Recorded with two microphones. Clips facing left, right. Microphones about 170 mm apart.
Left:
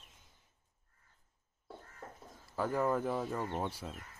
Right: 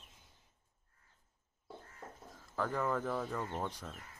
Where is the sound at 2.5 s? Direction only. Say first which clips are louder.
Left 3 dB; 10° left (ahead or behind).